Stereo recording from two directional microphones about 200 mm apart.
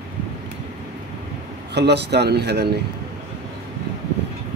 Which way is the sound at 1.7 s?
55° right (ahead or behind).